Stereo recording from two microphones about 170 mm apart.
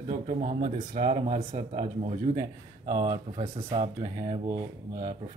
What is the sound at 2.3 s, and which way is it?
Speech, 25° right (ahead or behind).